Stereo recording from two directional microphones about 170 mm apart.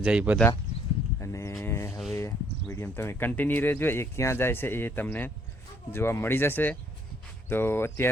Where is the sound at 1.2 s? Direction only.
15° left (ahead or behind).